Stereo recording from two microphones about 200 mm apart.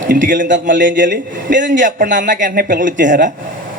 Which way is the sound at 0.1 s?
40° right (ahead or behind).